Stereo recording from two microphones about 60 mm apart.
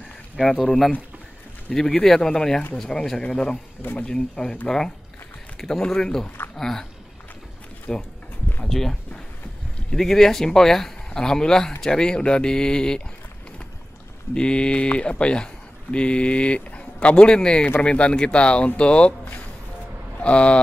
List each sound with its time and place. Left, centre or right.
0.4 s speech: centre
14.3 s speech: centre